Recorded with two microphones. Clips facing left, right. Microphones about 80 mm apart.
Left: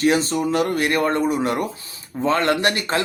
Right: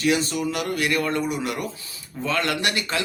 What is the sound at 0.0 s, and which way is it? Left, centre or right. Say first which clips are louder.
Speech: left 4 dB; left.